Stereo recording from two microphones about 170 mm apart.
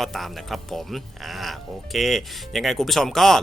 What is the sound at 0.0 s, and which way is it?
Speech, centre (ahead or behind).